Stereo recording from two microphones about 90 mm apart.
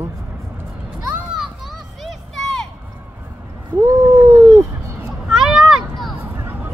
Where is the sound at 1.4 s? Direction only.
Centre (ahead or behind).